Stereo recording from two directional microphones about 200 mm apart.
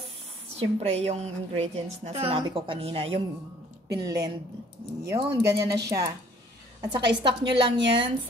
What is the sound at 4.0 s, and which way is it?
Speech, 15° right (ahead or behind).